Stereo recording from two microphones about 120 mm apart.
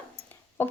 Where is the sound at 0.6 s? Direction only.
15° left (ahead or behind).